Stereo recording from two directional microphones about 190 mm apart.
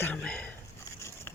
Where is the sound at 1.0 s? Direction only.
15° left (ahead or behind).